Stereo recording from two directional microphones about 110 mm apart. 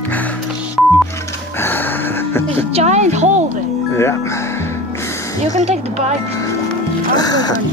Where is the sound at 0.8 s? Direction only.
Centre (ahead or behind).